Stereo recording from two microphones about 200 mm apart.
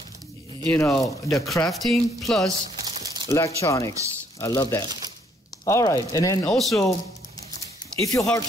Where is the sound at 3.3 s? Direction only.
15° left (ahead or behind).